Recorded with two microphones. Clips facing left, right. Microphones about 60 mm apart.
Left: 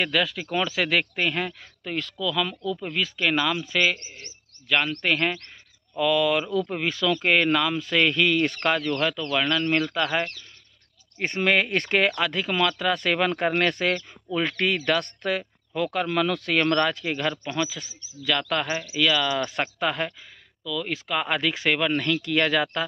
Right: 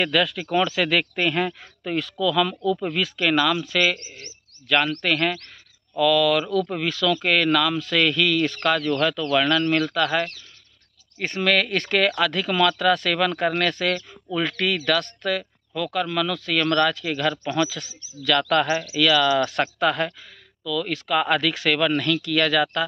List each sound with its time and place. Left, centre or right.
0.0 s speech: centre; by 8.5 s left
8.9 s speech: centre
9.9 s speech: left
17.3 s speech: centre